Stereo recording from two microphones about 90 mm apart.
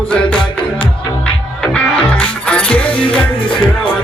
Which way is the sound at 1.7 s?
15° left (ahead or behind).